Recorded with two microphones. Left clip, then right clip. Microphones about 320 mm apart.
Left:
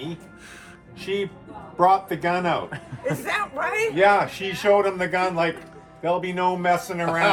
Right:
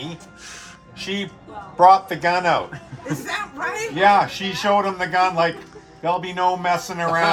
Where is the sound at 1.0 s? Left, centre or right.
Right.